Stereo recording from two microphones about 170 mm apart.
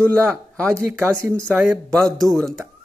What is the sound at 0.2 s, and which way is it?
Speech, 5° left (ahead or behind).